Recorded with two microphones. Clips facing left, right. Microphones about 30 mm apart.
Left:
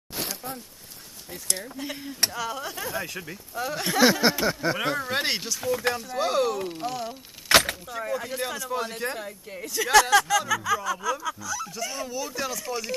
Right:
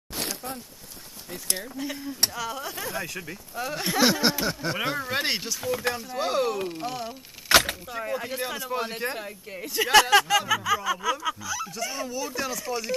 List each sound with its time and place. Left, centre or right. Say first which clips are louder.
1.7 s speech: right 2 dB; centre
7.9 s speech: left 1 dB; centre
9.0 s speech: even; centre; by 10.4 s right
10.5 s speech: right 1 dB; centre